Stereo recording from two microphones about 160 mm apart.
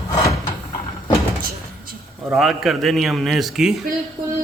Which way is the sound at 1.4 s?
65° right (ahead or behind).